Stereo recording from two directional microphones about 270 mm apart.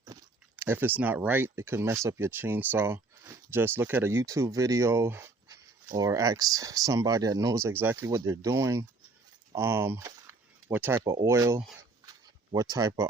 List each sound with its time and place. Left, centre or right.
0.0 s speech: centre
12.7 s speech: centre